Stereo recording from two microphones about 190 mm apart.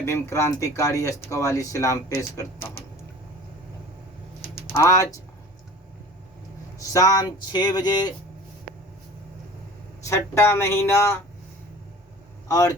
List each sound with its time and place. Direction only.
0.0 s speech: 15° left (ahead or behind)
4.7 s speech: 15° left (ahead or behind)
6.9 s speech: 20° left (ahead or behind)
10.1 s speech: 15° left (ahead or behind)
12.5 s speech: 20° left (ahead or behind)